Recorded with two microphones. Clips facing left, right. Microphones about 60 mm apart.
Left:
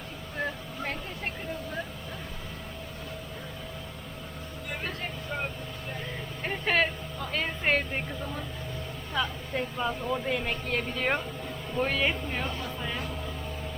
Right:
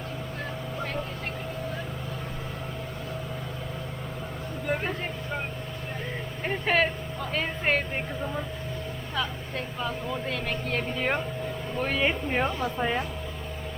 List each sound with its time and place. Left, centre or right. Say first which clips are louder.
6.4 s vehicle: right 2 dB; centre
8.2 s speech: right 4 dB; centre
9.1 s speech: left 2 dB; centre
12.6 s speech: right 7 dB; right